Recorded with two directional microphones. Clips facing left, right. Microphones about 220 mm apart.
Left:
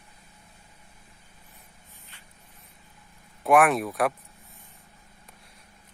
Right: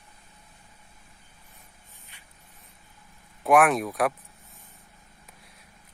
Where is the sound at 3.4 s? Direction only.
Centre (ahead or behind).